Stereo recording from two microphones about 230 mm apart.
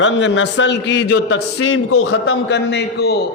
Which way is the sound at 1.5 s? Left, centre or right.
Left.